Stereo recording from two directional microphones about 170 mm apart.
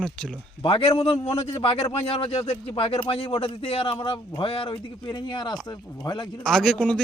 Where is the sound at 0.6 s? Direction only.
35° left (ahead or behind).